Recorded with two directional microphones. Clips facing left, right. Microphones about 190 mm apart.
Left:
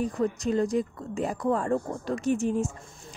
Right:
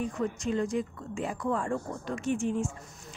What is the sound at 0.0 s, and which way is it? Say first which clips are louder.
A woman's voice: left 4 dB; 35° left (ahead or behind).